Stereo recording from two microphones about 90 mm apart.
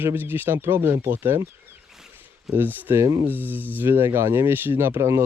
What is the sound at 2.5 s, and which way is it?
Speech, 25° right (ahead or behind).